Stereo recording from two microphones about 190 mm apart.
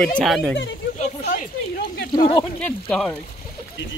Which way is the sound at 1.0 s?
40° left (ahead or behind).